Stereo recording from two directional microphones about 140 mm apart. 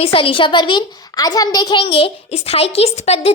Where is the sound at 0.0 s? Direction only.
40° left (ahead or behind).